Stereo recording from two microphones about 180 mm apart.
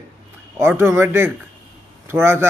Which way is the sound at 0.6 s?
15° right (ahead or behind).